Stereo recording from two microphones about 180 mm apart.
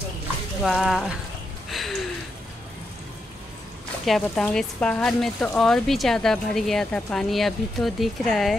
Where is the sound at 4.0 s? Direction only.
Centre (ahead or behind).